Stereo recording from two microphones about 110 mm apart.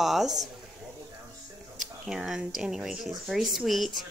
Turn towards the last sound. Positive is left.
turn(degrees=0)  # may be behind; listen again after turning